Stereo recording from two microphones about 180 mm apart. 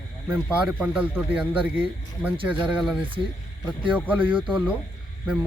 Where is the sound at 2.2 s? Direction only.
10° right (ahead or behind).